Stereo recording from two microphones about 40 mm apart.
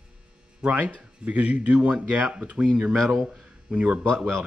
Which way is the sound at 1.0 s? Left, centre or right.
Right.